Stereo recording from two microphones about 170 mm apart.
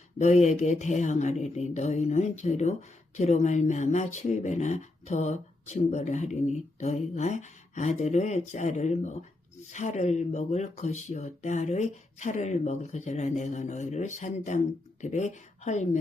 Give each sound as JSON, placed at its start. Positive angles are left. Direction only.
{"t": 0.2, "sound": "speech", "side_deg": 40}